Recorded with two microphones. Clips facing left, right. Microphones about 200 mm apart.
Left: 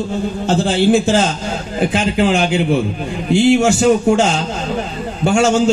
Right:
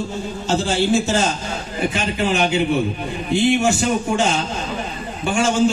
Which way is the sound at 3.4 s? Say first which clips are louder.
Left 5 dB; 90° left.